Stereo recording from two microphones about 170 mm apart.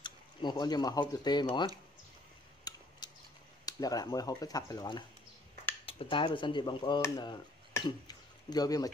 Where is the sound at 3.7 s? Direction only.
20° left (ahead or behind).